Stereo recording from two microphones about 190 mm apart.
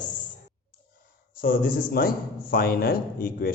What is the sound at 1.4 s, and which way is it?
A man's voice, 50° left (ahead or behind).